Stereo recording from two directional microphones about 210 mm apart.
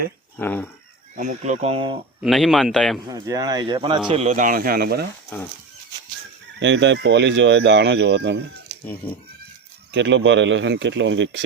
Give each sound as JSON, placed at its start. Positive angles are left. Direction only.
{"t": 0.3, "sound": "speech", "side_deg": 10}
{"t": 1.1, "sound": "speech", "side_deg": -35}
{"t": 2.2, "sound": "a man's voice", "side_deg": 0}
{"t": 3.1, "sound": "speech", "side_deg": -15}
{"t": 4.1, "sound": "speech", "side_deg": -35}
{"t": 6.6, "sound": "speech", "side_deg": -60}
{"t": 9.0, "sound": "speech", "side_deg": 10}
{"t": 9.9, "sound": "speech", "side_deg": -60}